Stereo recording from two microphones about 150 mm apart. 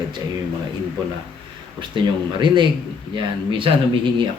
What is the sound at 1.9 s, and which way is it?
Speech, 30° right (ahead or behind).